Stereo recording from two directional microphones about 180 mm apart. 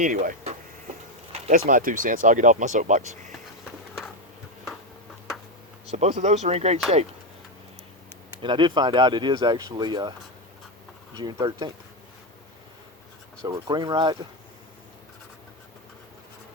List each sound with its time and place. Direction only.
0.0 s speech: 45° right (ahead or behind)
5.9 s speech: 40° right (ahead or behind)
8.4 s speech: 25° right (ahead or behind)
11.2 s speech: 25° right (ahead or behind)
13.4 s speech: 25° right (ahead or behind)